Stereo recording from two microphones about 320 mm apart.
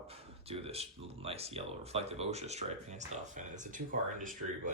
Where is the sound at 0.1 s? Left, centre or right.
Centre.